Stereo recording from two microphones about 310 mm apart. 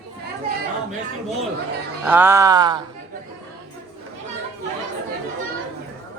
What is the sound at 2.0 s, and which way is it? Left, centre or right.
Speech, centre.